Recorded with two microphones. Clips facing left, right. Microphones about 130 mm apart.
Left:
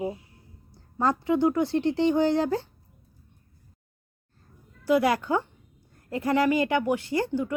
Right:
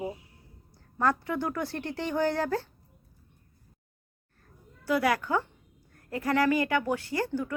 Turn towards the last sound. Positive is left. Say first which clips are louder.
# left 4 dB
turn(degrees=20)  # may be behind; listen again after turning